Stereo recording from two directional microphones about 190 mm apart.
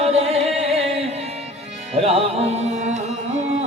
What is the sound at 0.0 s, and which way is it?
Music, 30° right (ahead or behind).